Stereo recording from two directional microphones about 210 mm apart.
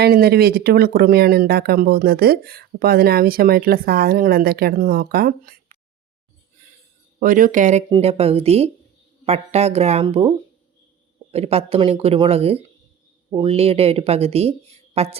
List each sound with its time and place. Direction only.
0.0 s speech: 50° right (ahead or behind)
7.2 s speech: 40° right (ahead or behind)
7.9 s speech: 25° right (ahead or behind)